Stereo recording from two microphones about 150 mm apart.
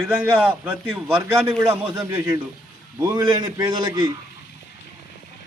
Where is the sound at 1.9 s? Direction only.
25° right (ahead or behind).